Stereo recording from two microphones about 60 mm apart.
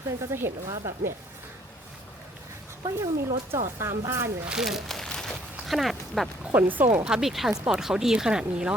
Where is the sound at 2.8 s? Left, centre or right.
Right.